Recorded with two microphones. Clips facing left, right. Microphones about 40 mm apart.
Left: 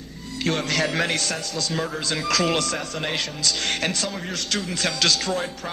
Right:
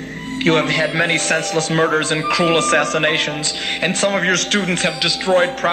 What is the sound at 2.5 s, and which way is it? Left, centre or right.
Speech, right.